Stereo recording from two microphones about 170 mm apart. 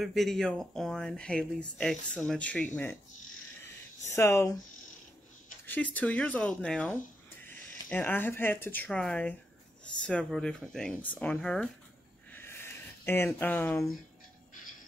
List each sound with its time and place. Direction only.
0.0 s speech: centre (ahead or behind)
4.1 s speech: 15° left (ahead or behind)
5.9 s speech: 10° left (ahead or behind)
12.3 s a sound: 15° left (ahead or behind)